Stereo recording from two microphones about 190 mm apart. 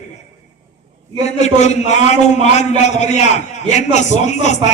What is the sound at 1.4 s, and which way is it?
A man's voice, 35° left (ahead or behind).